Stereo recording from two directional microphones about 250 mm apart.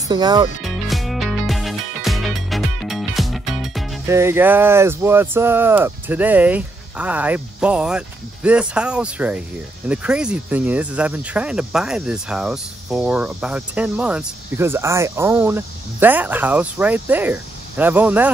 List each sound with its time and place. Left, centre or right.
0.1 s speech: centre
0.6 s music: centre
4.1 s speech: centre